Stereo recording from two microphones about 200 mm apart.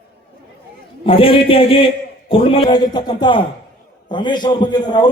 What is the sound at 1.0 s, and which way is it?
A man's voice, 25° left (ahead or behind).